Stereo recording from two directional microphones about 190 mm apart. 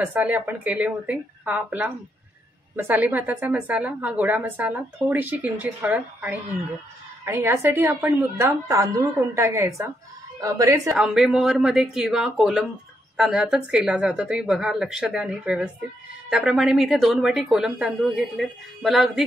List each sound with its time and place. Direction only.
0.0 s a woman's voice: 10° right (ahead or behind)
11.0 s a woman's voice: 5° right (ahead or behind)